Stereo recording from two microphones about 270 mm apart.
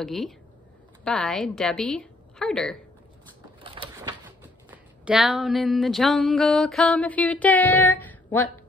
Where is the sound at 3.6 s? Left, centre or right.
Centre.